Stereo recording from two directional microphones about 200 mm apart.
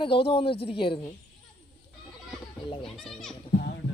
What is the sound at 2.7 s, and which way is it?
Speech, 25° left (ahead or behind).